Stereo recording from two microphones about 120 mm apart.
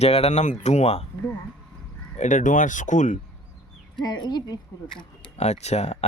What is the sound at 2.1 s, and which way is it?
Speech, 90° left.